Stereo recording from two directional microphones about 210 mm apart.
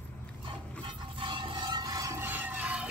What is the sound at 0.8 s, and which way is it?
Music, 25° right (ahead or behind).